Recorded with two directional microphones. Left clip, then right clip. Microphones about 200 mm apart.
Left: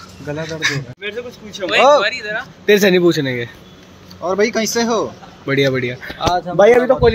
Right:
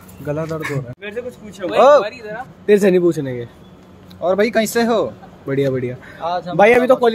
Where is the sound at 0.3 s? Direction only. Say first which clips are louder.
Right 2 dB; 55° right (ahead or behind).